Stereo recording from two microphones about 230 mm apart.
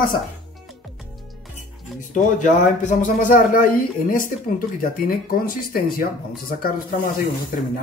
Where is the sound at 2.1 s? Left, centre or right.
Left.